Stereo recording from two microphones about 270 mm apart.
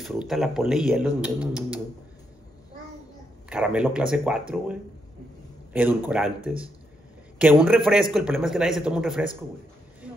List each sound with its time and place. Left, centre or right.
0.0 s speech: centre
3.4 s speech: centre